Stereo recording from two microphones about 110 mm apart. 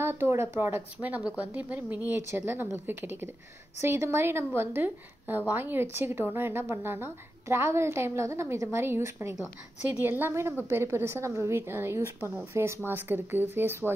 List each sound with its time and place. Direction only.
0.0 s a woman's voice: 20° right (ahead or behind)